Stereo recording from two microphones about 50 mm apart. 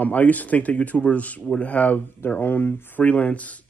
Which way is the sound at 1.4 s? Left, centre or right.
Centre.